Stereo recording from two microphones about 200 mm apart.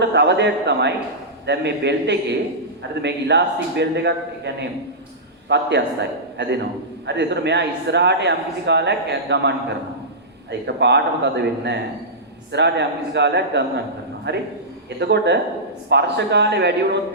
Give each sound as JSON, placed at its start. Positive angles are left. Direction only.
{"t": 0.0, "sound": "a man's voice", "side_deg": -55}